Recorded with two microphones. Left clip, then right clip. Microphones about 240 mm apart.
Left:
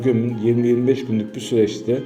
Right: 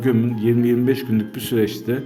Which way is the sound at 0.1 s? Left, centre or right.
Right.